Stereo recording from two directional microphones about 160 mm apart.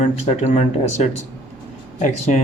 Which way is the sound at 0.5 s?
45° left (ahead or behind).